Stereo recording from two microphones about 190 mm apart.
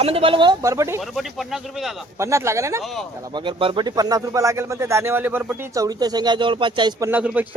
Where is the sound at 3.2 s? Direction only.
25° right (ahead or behind).